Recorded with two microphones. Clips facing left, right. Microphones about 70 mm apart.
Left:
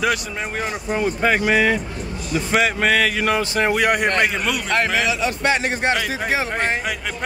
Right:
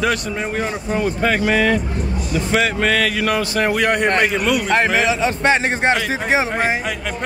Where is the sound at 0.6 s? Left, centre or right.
Centre.